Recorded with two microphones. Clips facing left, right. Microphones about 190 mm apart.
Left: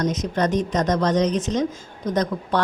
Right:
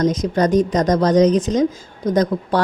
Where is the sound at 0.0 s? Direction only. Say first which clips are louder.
Right 5 dB; 35° right (ahead or behind).